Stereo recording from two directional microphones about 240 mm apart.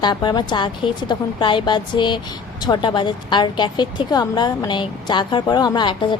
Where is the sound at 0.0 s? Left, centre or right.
Centre.